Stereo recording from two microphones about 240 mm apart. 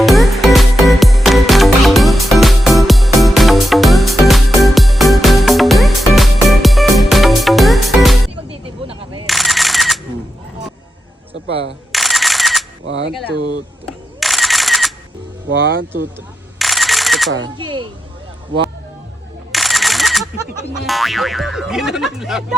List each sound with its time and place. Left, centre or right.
0.0 s music: centre
8.4 s a sound: right
9.2 s camera: centre
11.9 s camera: centre
12.8 s a sound: right
13.8 s camera: centre
15.4 s vehicle: right
16.6 s camera: centre
17.6 s speech: centre
19.5 s camera: centre
20.4 s speech: centre
20.8 s speech: centre